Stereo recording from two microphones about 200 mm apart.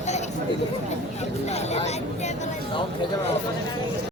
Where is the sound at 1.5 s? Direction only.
35° left (ahead or behind).